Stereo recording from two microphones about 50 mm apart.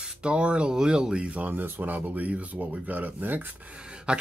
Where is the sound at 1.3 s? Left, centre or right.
Right.